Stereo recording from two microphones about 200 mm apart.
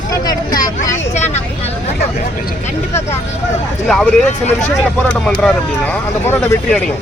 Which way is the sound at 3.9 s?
5° left (ahead or behind).